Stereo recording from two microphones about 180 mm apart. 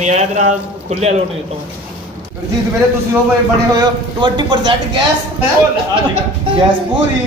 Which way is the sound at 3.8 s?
25° right (ahead or behind).